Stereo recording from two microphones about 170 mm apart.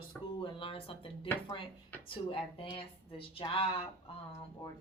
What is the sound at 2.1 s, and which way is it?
A woman's voice, 30° left (ahead or behind).